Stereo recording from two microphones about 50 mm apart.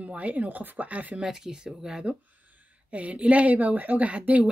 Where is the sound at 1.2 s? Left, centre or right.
Centre.